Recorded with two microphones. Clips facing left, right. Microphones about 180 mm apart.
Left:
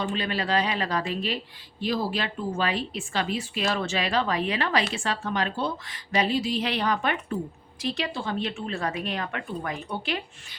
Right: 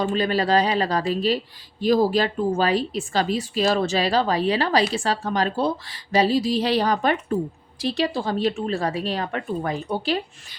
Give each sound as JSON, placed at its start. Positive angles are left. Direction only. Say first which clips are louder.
{"t": 0.0, "sound": "a woman's voice", "louder": "right 7 dB", "side_deg": -40}